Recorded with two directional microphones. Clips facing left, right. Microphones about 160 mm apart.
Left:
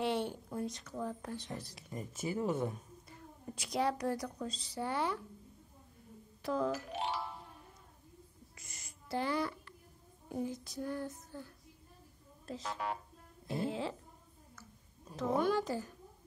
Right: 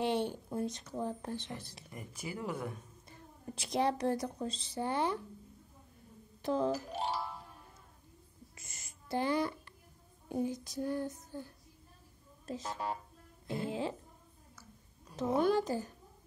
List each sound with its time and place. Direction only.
0.0 s speech: 20° right (ahead or behind)
1.9 s speech: 25° left (ahead or behind)
3.1 s a woman's voice: 25° right (ahead or behind)
6.4 s speech: 25° right (ahead or behind)
8.5 s a sound: 25° right (ahead or behind)
10.3 s speech: 20° right (ahead or behind)
15.1 s speech: 25° right (ahead or behind)